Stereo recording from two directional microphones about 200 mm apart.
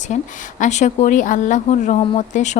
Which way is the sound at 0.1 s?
40° left (ahead or behind).